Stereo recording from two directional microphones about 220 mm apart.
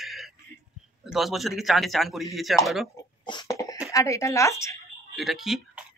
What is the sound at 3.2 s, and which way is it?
Cough, 20° left (ahead or behind).